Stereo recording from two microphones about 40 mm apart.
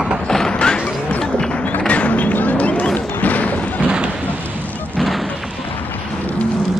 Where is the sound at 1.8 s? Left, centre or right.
Left.